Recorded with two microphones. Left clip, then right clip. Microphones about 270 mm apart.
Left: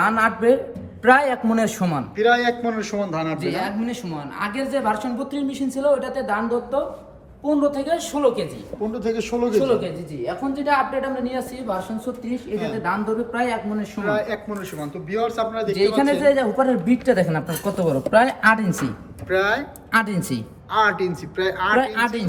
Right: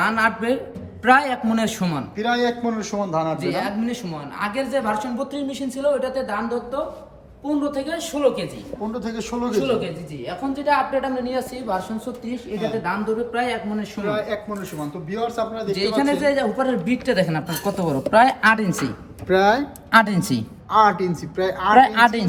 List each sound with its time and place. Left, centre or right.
0.0 s speech: centre
2.1 s a man's voice: centre
5.7 s speech: centre
8.9 s a man's voice: centre
10.5 s speech: centre
14.0 s a man's voice: centre
15.7 s speech: centre
16.8 s speech: centre
17.2 s speech: centre
19.3 s speech: centre
20.1 s speech: centre
20.7 s a man's voice: centre
21.9 s speech: centre